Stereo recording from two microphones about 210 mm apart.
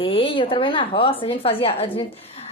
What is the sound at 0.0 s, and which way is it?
A woman's voice, 25° left (ahead or behind).